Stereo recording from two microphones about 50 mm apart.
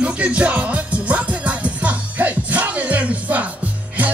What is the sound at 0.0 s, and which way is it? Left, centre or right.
Music, right.